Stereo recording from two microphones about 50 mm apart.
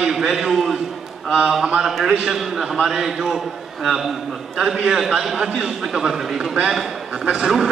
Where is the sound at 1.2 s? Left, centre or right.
Centre.